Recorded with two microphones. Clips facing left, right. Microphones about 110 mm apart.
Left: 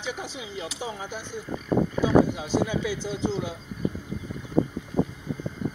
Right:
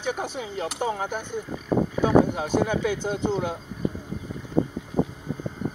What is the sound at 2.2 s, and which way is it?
Speech, 50° right (ahead or behind).